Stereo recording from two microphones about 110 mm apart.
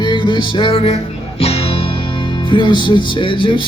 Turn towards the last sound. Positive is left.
turn(degrees=50)  # may be behind; listen again after turning